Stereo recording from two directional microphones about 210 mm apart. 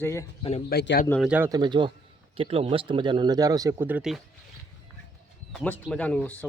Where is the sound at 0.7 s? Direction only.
50° left (ahead or behind).